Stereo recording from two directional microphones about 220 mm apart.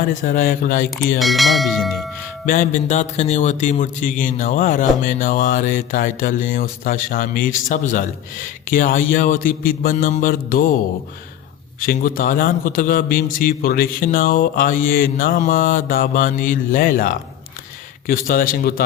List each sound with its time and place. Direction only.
0.2 s a man's voice: 40° left (ahead or behind)
1.2 s speech: centre (ahead or behind)
2.5 s a man's voice: 35° left (ahead or behind)
11.8 s a man's voice: 40° left (ahead or behind)